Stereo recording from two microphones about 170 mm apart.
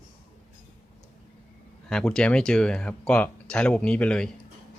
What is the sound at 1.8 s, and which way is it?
Speech, 5° left (ahead or behind).